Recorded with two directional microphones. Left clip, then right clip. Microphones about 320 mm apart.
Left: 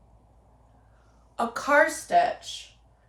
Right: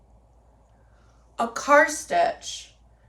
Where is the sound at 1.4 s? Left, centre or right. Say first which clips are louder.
Right 3 dB; centre.